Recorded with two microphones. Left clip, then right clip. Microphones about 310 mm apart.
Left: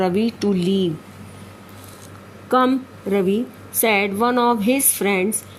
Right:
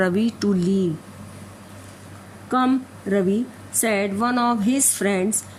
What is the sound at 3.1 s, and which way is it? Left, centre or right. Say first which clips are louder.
Speech: left 2 dB; centre.